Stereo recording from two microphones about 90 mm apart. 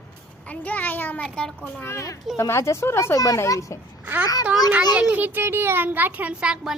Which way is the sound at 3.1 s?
40° left (ahead or behind).